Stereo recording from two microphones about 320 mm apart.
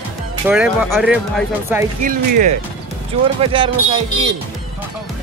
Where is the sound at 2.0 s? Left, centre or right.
Right.